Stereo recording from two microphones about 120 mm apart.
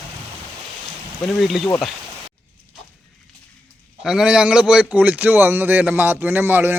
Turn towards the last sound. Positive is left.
turn(degrees=-20)  # may be behind; listen again after turning